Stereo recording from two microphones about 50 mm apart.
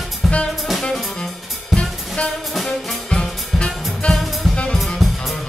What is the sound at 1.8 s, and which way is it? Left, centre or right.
Drum kit, left.